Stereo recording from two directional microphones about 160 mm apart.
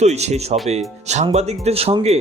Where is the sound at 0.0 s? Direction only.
45° right (ahead or behind).